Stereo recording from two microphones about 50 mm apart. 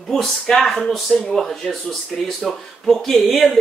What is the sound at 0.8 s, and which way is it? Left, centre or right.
Speech, centre.